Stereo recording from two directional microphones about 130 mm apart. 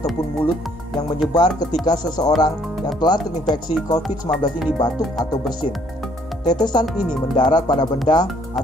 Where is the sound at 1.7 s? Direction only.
30° left (ahead or behind).